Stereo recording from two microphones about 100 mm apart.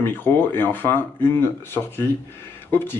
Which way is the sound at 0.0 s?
20° left (ahead or behind).